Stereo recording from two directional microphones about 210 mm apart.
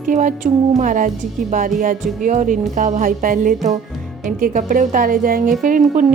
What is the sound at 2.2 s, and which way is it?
A woman's voice, 40° right (ahead or behind).